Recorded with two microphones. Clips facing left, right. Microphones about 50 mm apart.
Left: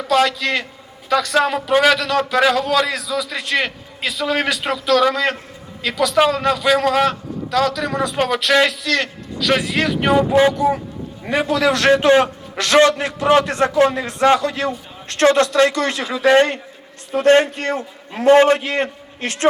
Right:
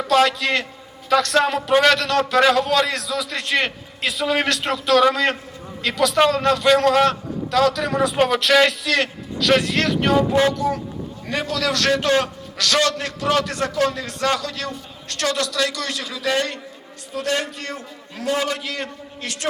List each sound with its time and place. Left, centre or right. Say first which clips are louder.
0.0 s a man's voice: even; centre; by 19.5 s left